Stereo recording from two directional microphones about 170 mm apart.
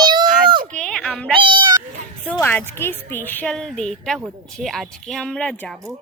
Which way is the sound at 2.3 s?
15° left (ahead or behind).